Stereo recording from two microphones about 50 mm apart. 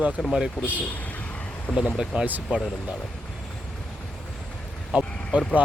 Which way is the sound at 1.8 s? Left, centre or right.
Centre.